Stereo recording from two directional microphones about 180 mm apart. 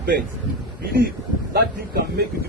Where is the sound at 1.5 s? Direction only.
60° right (ahead or behind).